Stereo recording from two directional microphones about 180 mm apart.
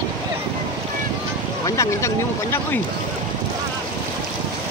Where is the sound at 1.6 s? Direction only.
15° left (ahead or behind).